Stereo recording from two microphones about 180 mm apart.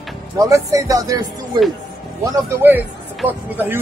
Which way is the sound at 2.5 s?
10° right (ahead or behind).